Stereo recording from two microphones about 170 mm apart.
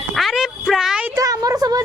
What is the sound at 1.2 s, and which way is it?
Speech, 20° right (ahead or behind).